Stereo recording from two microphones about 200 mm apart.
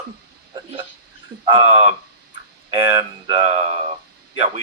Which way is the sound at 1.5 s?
30° right (ahead or behind).